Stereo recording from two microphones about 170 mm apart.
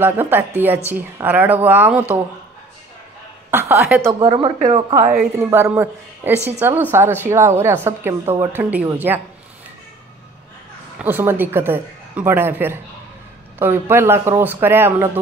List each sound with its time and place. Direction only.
0.0 s a woman's voice: 10° right (ahead or behind)
3.4 s a woman's voice: 10° right (ahead or behind)
4.2 s speech: 30° right (ahead or behind)
4.6 s a woman's voice: 45° right (ahead or behind)
5.4 s a woman's voice: 15° right (ahead or behind)
11.0 s a woman's voice: 10° right (ahead or behind)